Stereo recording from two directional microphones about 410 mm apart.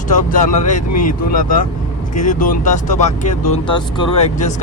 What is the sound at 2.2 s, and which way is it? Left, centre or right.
Speech, centre.